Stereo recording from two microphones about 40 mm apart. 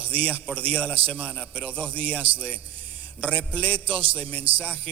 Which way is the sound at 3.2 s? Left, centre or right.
Left.